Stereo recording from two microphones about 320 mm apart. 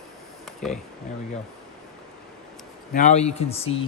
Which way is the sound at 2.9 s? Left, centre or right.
Left.